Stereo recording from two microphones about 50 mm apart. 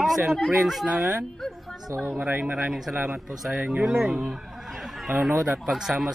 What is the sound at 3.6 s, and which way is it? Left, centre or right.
Speech, right.